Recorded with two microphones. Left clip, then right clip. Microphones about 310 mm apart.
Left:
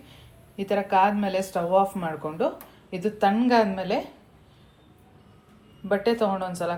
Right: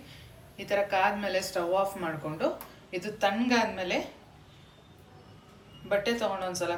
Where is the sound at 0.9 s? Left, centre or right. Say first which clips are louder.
Left 9 dB; left.